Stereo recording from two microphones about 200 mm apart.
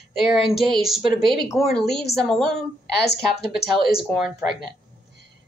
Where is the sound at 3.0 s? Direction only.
55° left (ahead or behind).